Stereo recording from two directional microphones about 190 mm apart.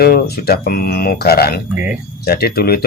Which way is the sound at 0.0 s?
55° left (ahead or behind).